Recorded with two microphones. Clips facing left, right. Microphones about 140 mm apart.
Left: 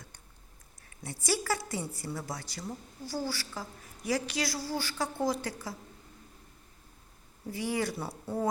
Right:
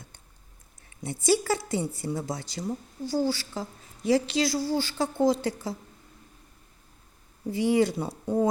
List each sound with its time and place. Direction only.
0.9 s a woman's voice: 25° right (ahead or behind)
7.5 s a woman's voice: 25° right (ahead or behind)